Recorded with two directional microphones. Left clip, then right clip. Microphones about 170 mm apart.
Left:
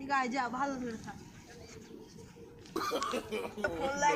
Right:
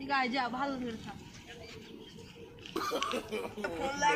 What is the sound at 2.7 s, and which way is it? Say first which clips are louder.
A woman's voice: even; centre (ahead or behind).